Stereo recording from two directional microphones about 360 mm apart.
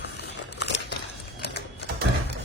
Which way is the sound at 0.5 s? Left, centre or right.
Left.